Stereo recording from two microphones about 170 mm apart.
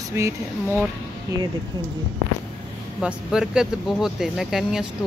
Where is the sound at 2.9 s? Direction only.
5° right (ahead or behind).